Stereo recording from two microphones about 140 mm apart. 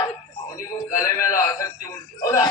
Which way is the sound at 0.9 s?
20° left (ahead or behind).